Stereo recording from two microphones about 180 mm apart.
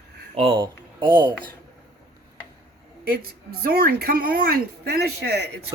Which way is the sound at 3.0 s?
55° right (ahead or behind).